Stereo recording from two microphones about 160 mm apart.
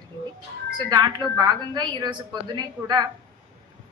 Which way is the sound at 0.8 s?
25° right (ahead or behind).